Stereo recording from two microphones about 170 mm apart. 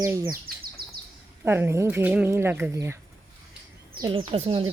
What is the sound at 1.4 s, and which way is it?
Speech, 15° right (ahead or behind).